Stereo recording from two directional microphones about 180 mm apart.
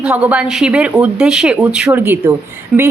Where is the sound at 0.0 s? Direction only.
5° right (ahead or behind).